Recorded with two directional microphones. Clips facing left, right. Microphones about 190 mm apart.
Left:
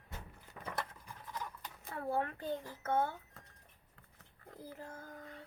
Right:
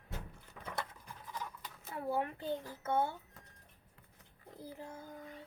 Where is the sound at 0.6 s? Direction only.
5° left (ahead or behind).